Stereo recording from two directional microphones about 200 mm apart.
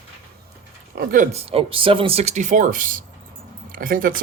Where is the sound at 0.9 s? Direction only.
40° right (ahead or behind).